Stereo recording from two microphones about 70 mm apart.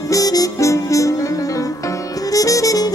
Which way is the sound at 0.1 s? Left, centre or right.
Left.